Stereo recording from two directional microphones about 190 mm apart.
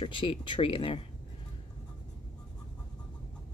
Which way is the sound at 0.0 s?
25° left (ahead or behind).